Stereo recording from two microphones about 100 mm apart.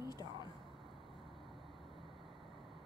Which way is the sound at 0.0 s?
40° left (ahead or behind).